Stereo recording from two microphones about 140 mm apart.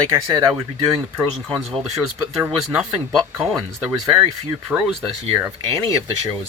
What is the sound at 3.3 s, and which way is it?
Speech, centre (ahead or behind).